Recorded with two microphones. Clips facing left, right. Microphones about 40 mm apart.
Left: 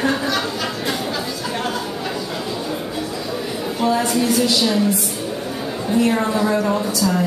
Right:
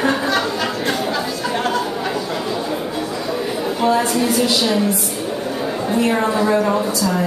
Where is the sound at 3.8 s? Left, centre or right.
Centre.